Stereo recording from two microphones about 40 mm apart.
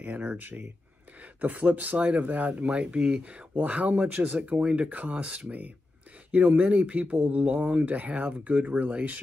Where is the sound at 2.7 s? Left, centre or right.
Right.